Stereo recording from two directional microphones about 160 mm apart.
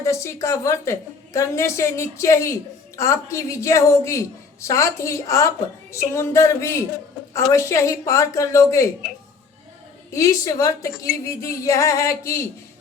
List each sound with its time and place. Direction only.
0.0 s a woman's voice: 20° left (ahead or behind)
5.9 s a sound: 20° left (ahead or behind)
7.3 s a woman's voice: 20° left (ahead or behind)
10.1 s a woman's voice: 20° left (ahead or behind)